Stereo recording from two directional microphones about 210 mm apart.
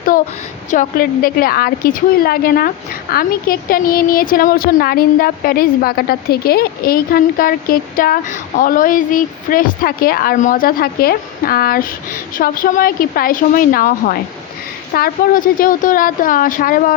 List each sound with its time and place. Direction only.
0.7 s a woman's voice: 40° left (ahead or behind)